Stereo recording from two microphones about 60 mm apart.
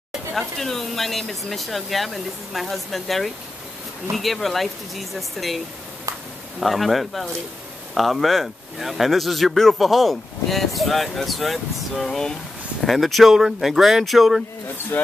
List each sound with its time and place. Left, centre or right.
0.3 s speech: centre
6.6 s speech: centre